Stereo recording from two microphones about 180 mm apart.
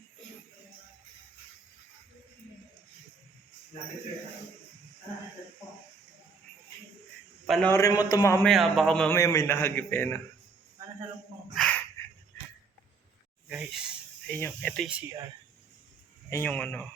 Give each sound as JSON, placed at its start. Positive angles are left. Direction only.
{"t": 7.4, "sound": "a man's voice", "side_deg": 0}
{"t": 7.7, "sound": "a man's voice", "side_deg": 20}
{"t": 8.4, "sound": "a man's voice", "side_deg": 0}
{"t": 9.1, "sound": "a man's voice", "side_deg": 15}
{"t": 11.5, "sound": "a sound", "side_deg": 5}
{"t": 13.5, "sound": "speech", "side_deg": -5}
{"t": 14.3, "sound": "a man's voice", "side_deg": 10}
{"t": 16.3, "sound": "a man's voice", "side_deg": 10}